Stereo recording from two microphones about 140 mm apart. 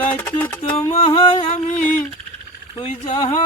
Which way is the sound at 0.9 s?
45° left (ahead or behind).